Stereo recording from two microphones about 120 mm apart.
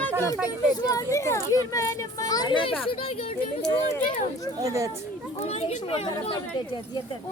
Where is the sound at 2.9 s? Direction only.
55° left (ahead or behind).